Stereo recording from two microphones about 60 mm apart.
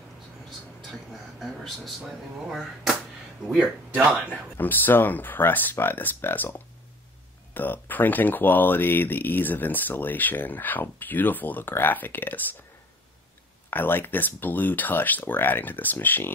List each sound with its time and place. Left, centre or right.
1.1 s speech: centre
3.4 s speech: centre
4.6 s speech: left
7.5 s speech: left
13.7 s speech: left